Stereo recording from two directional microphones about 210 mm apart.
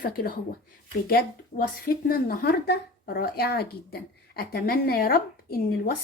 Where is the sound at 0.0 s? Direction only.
40° left (ahead or behind).